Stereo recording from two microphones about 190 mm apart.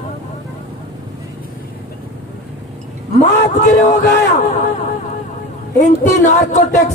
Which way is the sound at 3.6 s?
35° left (ahead or behind).